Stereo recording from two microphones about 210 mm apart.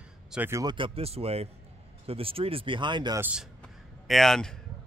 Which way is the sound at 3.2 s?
5° right (ahead or behind).